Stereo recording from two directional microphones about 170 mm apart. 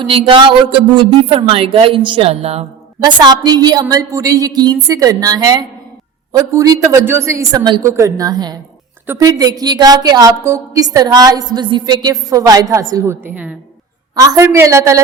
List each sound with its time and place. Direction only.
0.0 s speech: 30° right (ahead or behind)
3.0 s a woman's voice: 25° right (ahead or behind)